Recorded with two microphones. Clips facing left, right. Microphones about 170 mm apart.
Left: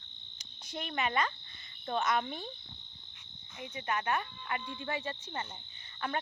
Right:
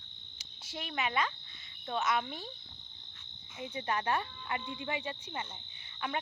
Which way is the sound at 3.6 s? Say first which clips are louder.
Right 1 dB; 30° right (ahead or behind).